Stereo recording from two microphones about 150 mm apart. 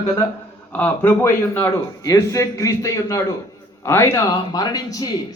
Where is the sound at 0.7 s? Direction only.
10° left (ahead or behind).